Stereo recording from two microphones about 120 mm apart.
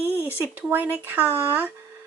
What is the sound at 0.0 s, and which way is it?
Speech, 15° right (ahead or behind).